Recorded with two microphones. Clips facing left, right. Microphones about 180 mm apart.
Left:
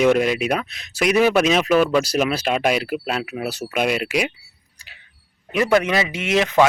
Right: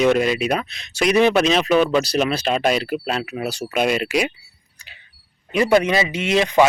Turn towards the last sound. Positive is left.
turn(degrees=5)  # may be behind; listen again after turning